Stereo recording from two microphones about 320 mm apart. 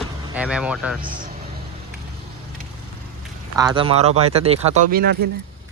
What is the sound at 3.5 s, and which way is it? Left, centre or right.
Speech, centre.